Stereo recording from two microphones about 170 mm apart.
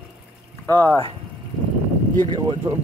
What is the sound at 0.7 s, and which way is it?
Speech, 10° left (ahead or behind).